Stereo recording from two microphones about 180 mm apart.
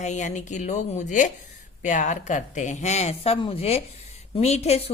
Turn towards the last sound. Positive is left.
turn(degrees=35)  # may be behind; listen again after turning